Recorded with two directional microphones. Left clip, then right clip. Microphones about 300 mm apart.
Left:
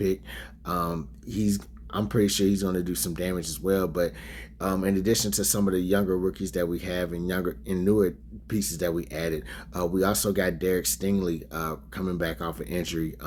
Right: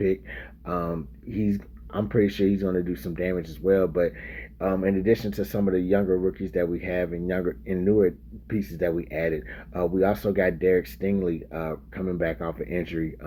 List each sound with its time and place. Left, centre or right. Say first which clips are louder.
0.0 s speech: right 2 dB; centre